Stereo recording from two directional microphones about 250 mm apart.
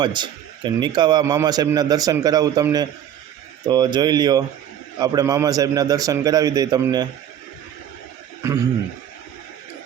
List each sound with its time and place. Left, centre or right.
0.0 s a man's voice: centre